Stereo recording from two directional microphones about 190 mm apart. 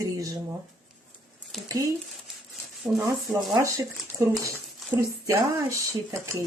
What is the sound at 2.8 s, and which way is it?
Speech, centre (ahead or behind).